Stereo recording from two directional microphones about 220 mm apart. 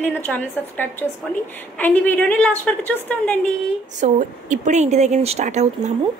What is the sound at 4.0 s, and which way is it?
Speech, 35° right (ahead or behind).